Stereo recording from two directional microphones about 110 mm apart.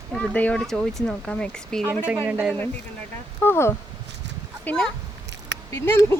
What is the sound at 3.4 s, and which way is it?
Speech, 20° left (ahead or behind).